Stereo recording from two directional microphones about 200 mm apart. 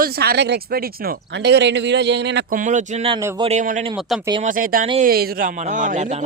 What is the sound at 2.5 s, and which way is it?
Speech, 40° right (ahead or behind).